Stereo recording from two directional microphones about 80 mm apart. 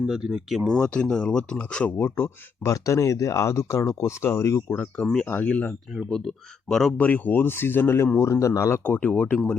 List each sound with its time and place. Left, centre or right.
0.0 s speech: centre
0.8 s speech: centre
2.0 s speech: left
2.7 s speech: left
4.7 s speech: centre
6.1 s speech: centre
6.9 s speech: left
8.8 s speech: centre